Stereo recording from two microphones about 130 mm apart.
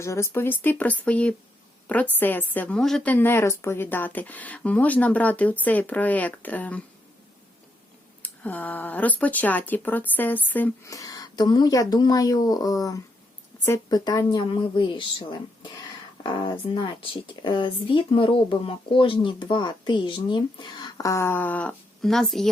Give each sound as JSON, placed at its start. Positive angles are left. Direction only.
{"t": 0.0, "sound": "a woman's voice", "side_deg": 20}
{"t": 8.2, "sound": "a woman's voice", "side_deg": 10}
{"t": 10.9, "sound": "speech", "side_deg": 25}